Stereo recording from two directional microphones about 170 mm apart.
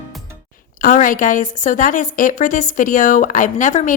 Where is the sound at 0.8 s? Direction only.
50° left (ahead or behind).